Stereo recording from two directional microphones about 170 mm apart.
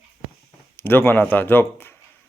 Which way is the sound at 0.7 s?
15° left (ahead or behind).